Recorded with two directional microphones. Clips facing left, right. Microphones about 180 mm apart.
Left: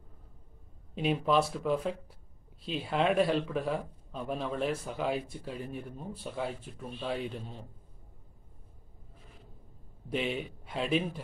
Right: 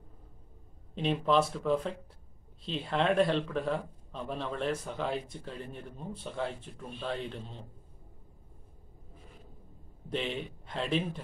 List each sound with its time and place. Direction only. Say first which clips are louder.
0.9 s speech: even; 10° left (ahead or behind)
10.0 s speech: left 2 dB; 5° left (ahead or behind)